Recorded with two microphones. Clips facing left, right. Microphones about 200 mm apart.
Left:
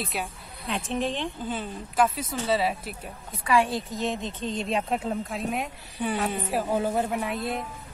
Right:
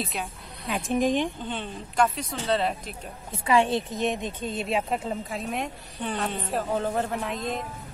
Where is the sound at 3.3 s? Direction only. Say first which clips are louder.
Right 2 dB; 20° right (ahead or behind).